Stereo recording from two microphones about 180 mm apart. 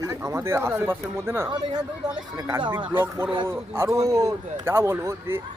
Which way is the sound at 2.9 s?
10° right (ahead or behind).